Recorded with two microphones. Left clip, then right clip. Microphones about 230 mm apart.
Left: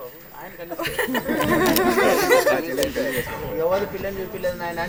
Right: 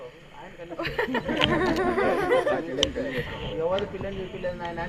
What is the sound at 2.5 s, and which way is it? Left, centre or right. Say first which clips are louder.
Speech: left 4 dB; centre.